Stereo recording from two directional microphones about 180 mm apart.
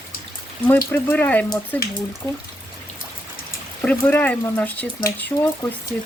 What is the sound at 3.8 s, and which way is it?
Speech, 10° left (ahead or behind).